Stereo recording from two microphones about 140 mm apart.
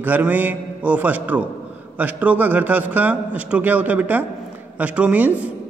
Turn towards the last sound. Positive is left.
turn(degrees=-10)  # may be behind; listen again after turning